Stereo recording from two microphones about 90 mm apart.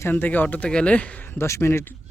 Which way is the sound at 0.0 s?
20° left (ahead or behind).